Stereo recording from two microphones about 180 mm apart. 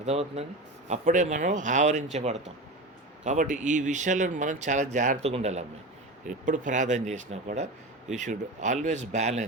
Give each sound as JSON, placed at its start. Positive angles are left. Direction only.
{"t": 0.0, "sound": "speech", "side_deg": -35}